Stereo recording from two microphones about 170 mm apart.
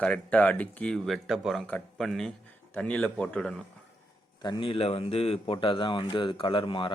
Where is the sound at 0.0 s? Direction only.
10° left (ahead or behind).